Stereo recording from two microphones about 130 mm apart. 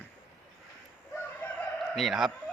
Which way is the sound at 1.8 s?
Centre (ahead or behind).